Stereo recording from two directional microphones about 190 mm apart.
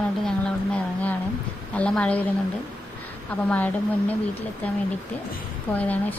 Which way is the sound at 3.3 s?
5° left (ahead or behind).